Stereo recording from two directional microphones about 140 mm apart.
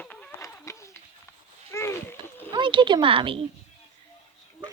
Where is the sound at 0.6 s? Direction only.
20° left (ahead or behind).